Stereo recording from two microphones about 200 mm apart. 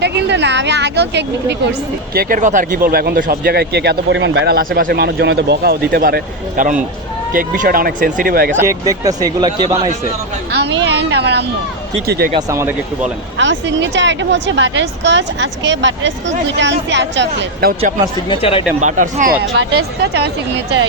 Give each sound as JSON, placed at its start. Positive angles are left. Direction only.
{"t": 0.0, "sound": "speech", "side_deg": -60}
{"t": 2.1, "sound": "speech", "side_deg": -40}
{"t": 8.5, "sound": "speech", "side_deg": -15}
{"t": 10.5, "sound": "speech", "side_deg": -60}
{"t": 12.3, "sound": "speech", "side_deg": -15}
{"t": 13.4, "sound": "speech", "side_deg": -65}
{"t": 18.3, "sound": "speech", "side_deg": 25}
{"t": 18.8, "sound": "speech", "side_deg": -35}
{"t": 19.5, "sound": "speech", "side_deg": -65}